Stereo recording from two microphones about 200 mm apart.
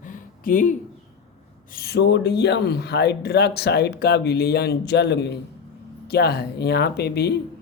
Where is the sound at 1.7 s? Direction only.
55° left (ahead or behind).